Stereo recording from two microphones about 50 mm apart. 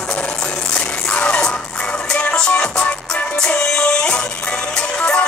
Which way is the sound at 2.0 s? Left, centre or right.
Centre.